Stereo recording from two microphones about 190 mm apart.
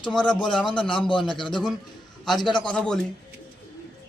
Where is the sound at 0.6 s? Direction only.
25° left (ahead or behind).